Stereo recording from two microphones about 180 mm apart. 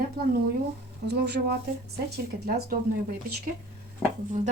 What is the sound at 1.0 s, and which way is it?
Speech, 70° right (ahead or behind).